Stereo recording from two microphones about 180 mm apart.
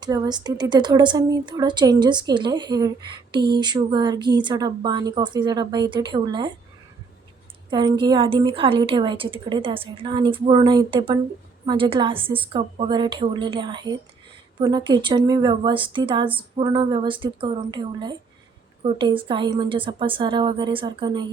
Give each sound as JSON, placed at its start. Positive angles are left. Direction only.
{"t": 0.0, "sound": "speech", "side_deg": -25}
{"t": 7.7, "sound": "speech", "side_deg": -25}